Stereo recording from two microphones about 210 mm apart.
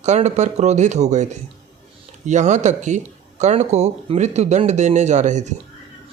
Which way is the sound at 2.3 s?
35° right (ahead or behind).